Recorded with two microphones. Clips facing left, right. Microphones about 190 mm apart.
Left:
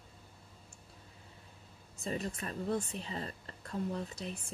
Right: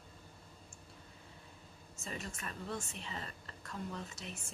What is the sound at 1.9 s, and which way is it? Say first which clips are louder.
Speech: left 8 dB; 35° left (ahead or behind).